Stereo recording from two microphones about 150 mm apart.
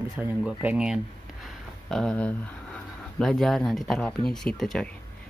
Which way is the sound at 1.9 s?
5° left (ahead or behind).